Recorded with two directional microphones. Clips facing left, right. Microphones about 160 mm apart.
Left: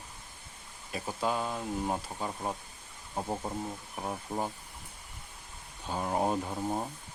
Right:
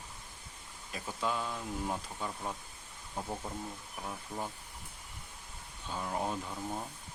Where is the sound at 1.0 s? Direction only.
40° left (ahead or behind).